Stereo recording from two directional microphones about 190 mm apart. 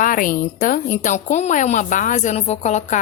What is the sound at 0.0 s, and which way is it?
A woman's voice, 45° left (ahead or behind).